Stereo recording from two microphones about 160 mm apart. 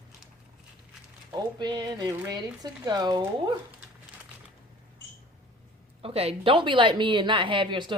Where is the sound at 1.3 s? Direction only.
25° right (ahead or behind).